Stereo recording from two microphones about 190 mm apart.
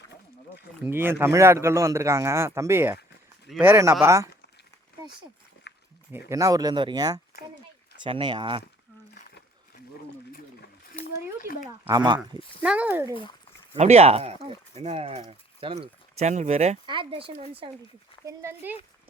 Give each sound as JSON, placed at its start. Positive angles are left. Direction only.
{"t": 0.9, "sound": "a man's voice", "side_deg": -10}
{"t": 5.7, "sound": "a sound", "side_deg": 65}
{"t": 6.1, "sound": "speech", "side_deg": -15}
{"t": 10.9, "sound": "a sound", "side_deg": 50}
{"t": 11.9, "sound": "speech", "side_deg": -20}
{"t": 12.6, "sound": "a man's voice", "side_deg": -5}
{"t": 13.7, "sound": "speech", "side_deg": -35}
{"t": 18.3, "sound": "a man's voice", "side_deg": -10}